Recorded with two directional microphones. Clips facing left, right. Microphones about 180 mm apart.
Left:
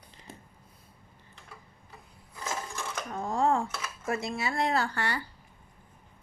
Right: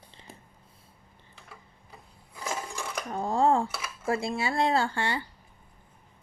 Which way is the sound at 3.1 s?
30° right (ahead or behind).